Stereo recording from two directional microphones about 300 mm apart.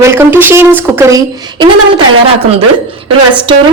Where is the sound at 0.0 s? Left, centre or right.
Centre.